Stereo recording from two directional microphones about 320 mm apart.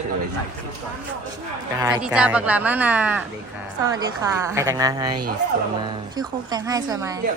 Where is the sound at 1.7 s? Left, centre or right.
Centre.